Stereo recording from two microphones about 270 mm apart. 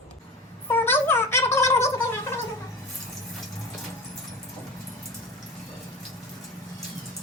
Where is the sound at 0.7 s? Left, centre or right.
Centre.